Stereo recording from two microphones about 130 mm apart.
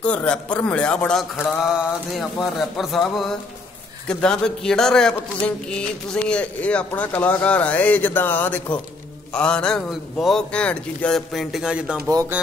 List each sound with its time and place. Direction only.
0.0 s speech: 10° left (ahead or behind)
1.6 s a man's voice: 5° right (ahead or behind)